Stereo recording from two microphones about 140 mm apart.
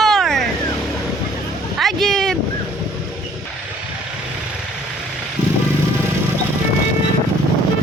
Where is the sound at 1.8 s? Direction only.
Centre (ahead or behind).